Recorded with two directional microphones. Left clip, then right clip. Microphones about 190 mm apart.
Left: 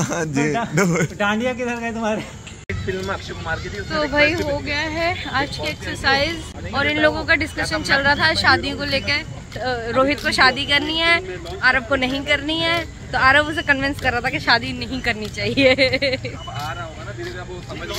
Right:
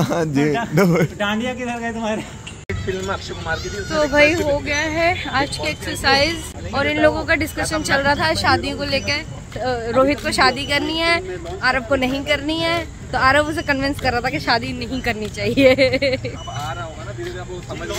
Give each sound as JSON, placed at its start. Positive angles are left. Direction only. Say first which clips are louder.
{"t": 0.0, "sound": "speech", "louder": "right 3 dB", "side_deg": -10}
{"t": 1.1, "sound": "speech", "louder": "left 2 dB", "side_deg": 40}
{"t": 2.9, "sound": "speech", "louder": "right 1 dB", "side_deg": -5}